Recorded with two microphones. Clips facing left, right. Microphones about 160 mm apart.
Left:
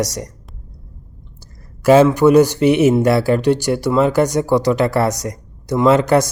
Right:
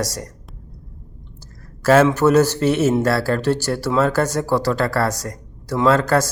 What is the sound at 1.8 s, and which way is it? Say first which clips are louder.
A man's voice: left 4 dB; 15° left (ahead or behind).